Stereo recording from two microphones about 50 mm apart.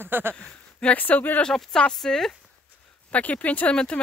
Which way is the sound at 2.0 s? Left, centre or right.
Centre.